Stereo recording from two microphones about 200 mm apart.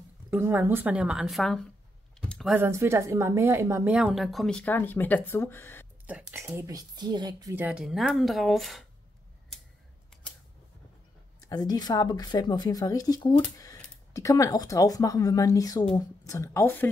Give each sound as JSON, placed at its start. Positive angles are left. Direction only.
{"t": 0.3, "sound": "a woman's voice", "side_deg": -10}
{"t": 2.1, "sound": "a sound", "side_deg": 0}
{"t": 2.5, "sound": "a woman's voice", "side_deg": -10}
{"t": 6.0, "sound": "speech", "side_deg": -10}
{"t": 11.4, "sound": "speech", "side_deg": 20}